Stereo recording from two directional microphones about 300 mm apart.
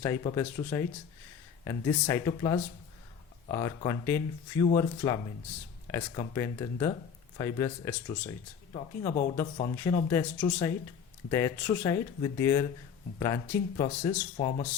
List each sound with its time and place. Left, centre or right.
0.0 s speech: centre